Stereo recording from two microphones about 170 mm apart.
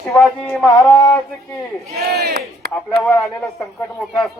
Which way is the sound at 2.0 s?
70° right (ahead or behind).